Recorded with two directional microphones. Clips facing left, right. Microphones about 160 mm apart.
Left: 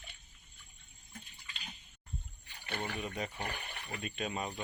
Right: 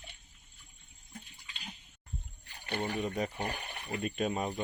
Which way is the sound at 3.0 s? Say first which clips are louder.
Right 6 dB; 40° right (ahead or behind).